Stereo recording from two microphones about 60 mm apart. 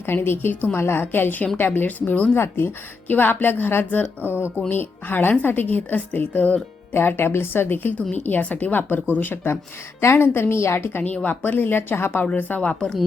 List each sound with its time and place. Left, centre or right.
0.0 s speech: left
2.3 s a woman's voice: left
3.1 s speech: left
4.3 s speech: right
4.7 s a woman's voice: left
11.0 s speech: left
11.4 s speech: left
12.1 s speech: left
12.6 s speech: centre